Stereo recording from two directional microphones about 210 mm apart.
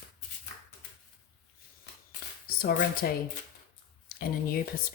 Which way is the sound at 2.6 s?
45° left (ahead or behind).